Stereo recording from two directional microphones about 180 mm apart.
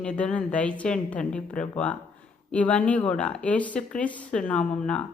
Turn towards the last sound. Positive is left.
turn(degrees=5)  # may be behind; listen again after turning